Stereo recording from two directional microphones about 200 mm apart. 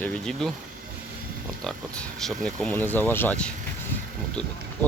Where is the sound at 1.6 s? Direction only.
5° left (ahead or behind).